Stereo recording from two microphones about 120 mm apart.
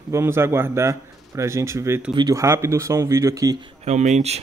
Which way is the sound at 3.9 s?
75° right (ahead or behind).